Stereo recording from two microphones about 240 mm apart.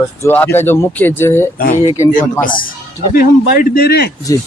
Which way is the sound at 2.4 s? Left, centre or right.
Left.